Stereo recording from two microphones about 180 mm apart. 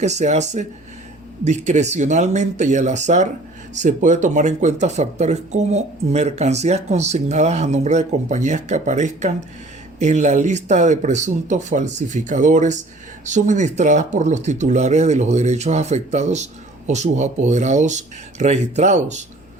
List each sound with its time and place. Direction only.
0.0 s speech: 40° right (ahead or behind)